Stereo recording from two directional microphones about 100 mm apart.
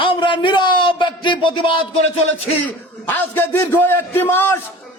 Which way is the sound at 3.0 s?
20° left (ahead or behind).